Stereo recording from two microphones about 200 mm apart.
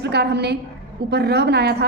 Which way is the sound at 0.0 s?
55° right (ahead or behind).